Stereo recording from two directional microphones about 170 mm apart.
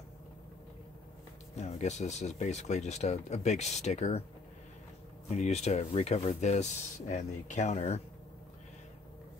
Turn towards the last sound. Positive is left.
turn(degrees=40)  # may be behind; listen again after turning